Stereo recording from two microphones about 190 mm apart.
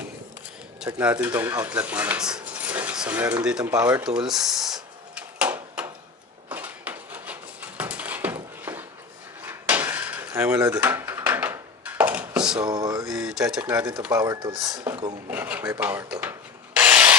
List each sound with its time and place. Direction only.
0.8 s filing: 5° right (ahead or behind)
1.5 s speech: 10° right (ahead or behind)
3.6 s filing: 20° right (ahead or behind)
4.3 s drawer open or close: centre (ahead or behind)
6.5 s a sound: 10° right (ahead or behind)
9.5 s dishes: 10° right (ahead or behind)
12.6 s a sound: 20° right (ahead or behind)
13.1 s speech: 5° right (ahead or behind)
14.1 s filing: 20° right (ahead or behind)
14.9 s filing: 5° right (ahead or behind)
16.7 s rub: 10° right (ahead or behind)